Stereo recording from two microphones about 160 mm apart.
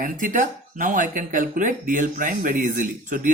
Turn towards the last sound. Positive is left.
turn(degrees=-55)  # may be behind; listen again after turning